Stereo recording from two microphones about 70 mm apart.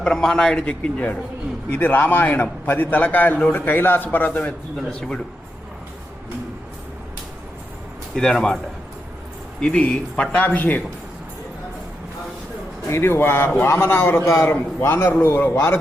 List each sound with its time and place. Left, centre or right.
0.0 s a man's voice: centre; by 4.5 s left
4.9 s a man's voice: centre
8.1 s a man's voice: centre
9.6 s a man's voice: centre
12.9 s a man's voice: left